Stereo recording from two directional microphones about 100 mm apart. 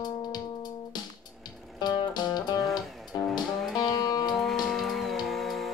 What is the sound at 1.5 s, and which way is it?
Music, centre (ahead or behind).